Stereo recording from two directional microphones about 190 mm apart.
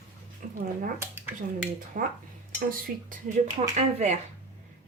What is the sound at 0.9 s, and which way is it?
Speech, 10° right (ahead or behind).